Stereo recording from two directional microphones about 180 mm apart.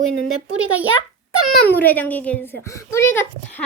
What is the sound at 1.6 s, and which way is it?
Speech, 10° left (ahead or behind).